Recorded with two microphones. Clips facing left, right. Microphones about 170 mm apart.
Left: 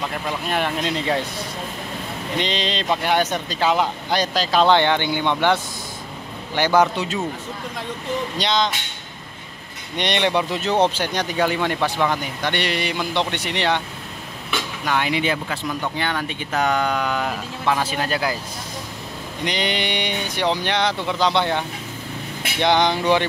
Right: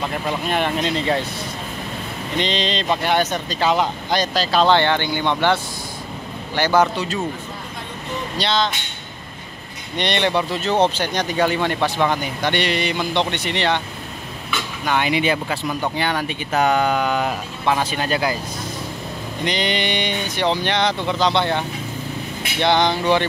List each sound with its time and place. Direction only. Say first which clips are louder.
0.5 s speech: right 1 dB; 5° left (ahead or behind)
2.3 s speech: right 2 dB; 10° left (ahead or behind)
6.5 s speech: even; 15° left (ahead or behind)
8.4 s speech: right 2 dB; 15° left (ahead or behind)
9.9 s speech: right 1 dB; 15° left (ahead or behind)
14.9 s speech: right 2 dB; 5° right (ahead or behind)
19.4 s speech: right 2 dB; 10° left (ahead or behind)